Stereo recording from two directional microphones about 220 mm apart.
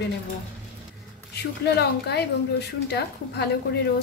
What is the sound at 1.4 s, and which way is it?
A woman's voice, 50° left (ahead or behind).